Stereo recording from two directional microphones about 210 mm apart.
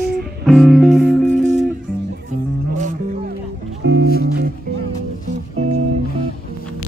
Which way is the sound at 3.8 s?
55° right (ahead or behind).